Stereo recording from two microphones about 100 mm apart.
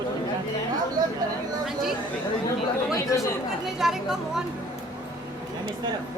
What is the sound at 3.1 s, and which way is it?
Speech, 35° left (ahead or behind).